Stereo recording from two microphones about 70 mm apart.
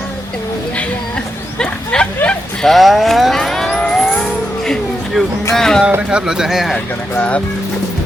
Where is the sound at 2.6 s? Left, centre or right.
Centre.